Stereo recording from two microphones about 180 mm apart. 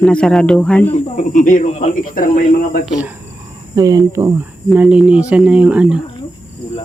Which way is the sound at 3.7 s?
20° right (ahead or behind).